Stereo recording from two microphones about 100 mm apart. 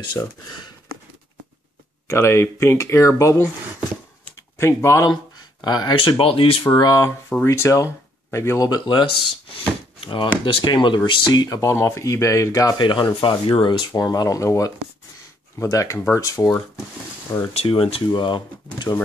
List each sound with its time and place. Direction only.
0.2 s speech: 25° left (ahead or behind)
2.0 s speech: 30° left (ahead or behind)
4.6 s speech: 25° left (ahead or behind)
5.0 s speech: 45° left (ahead or behind)
5.9 s speech: 65° left (ahead or behind)
6.8 s speech: 40° left (ahead or behind)
9.5 s speech: 60° left (ahead or behind); by 12.7 s 35° left (ahead or behind)
12.7 s speech: 50° left (ahead or behind); by 16.6 s 30° left (ahead or behind)
17.6 s speech: 65° left (ahead or behind)